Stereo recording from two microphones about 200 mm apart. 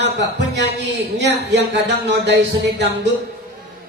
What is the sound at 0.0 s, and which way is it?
A man's voice, 60° right (ahead or behind).